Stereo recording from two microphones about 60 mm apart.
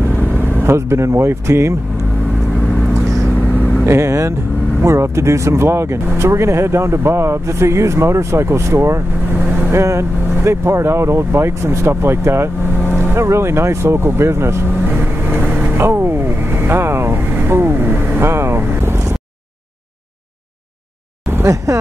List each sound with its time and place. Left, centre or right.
0.4 s vehicle: right
0.7 s speech: right
3.3 s vehicle: left
3.8 s speech: right
9.3 s vehicle: right
9.8 s speech: right
15.2 s vehicle: right
21.7 s speech: right